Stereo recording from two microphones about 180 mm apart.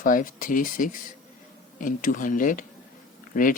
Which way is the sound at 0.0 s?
50° left (ahead or behind).